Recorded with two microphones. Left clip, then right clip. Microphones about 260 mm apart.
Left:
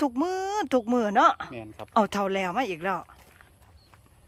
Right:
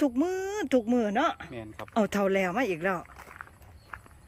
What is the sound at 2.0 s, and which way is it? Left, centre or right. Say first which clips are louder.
Speech: left 2 dB; centre.